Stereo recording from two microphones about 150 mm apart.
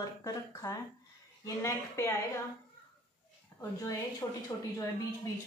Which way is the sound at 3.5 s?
20° left (ahead or behind).